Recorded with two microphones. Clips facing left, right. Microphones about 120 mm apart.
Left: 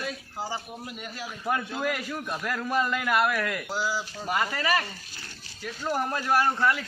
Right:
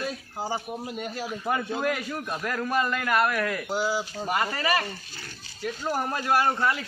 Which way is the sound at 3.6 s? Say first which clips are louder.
Right 3 dB; 20° right (ahead or behind).